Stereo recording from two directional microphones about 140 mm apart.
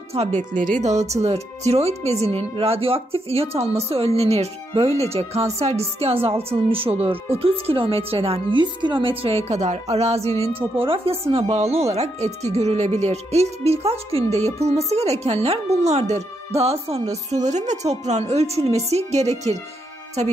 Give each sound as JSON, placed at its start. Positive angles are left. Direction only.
{"t": 0.1, "sound": "speech", "side_deg": -50}
{"t": 9.2, "sound": "speech", "side_deg": -50}